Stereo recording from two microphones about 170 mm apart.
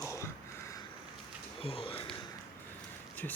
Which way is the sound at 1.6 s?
35° left (ahead or behind).